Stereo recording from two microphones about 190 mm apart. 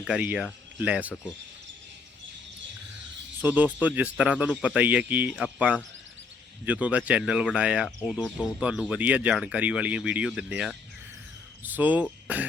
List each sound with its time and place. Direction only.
0.0 s speech: 5° right (ahead or behind)
3.4 s speech: 10° right (ahead or behind)